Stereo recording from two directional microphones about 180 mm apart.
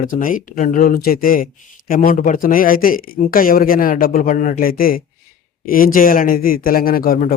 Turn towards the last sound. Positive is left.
turn(degrees=55)  # may be behind; listen again after turning